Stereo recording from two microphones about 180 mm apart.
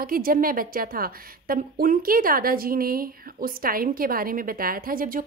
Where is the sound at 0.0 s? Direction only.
55° right (ahead or behind).